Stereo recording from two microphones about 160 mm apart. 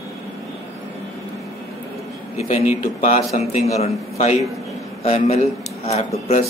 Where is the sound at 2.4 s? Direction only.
50° left (ahead or behind).